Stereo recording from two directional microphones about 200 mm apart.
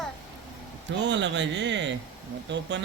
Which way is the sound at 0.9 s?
60° right (ahead or behind).